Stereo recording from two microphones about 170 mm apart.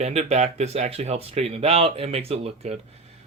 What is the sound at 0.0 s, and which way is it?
Speech, 40° right (ahead or behind).